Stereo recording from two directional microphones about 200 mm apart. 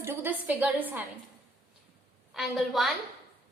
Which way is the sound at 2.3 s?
Centre (ahead or behind).